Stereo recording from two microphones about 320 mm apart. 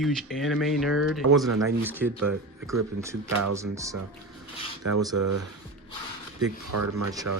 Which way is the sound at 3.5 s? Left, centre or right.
Centre.